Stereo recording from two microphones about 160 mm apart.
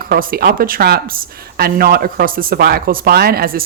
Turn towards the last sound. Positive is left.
turn(degrees=-70)  # may be behind; listen again after turning